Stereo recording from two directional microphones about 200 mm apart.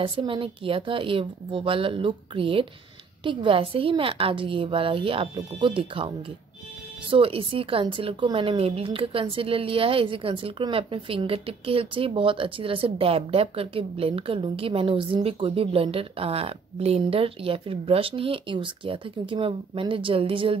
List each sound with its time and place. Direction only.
0.0 s a woman's voice: 25° right (ahead or behind)